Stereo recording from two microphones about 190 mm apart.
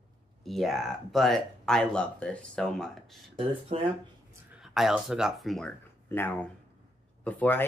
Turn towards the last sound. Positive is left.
turn(degrees=10)  # may be behind; listen again after turning